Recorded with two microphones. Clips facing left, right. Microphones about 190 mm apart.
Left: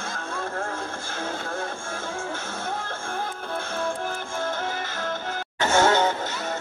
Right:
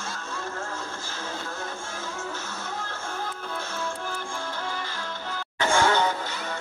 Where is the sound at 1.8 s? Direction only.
50° left (ahead or behind).